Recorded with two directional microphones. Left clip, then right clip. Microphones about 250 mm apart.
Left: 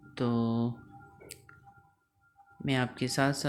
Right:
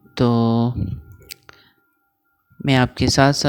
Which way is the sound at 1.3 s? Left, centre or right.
Right.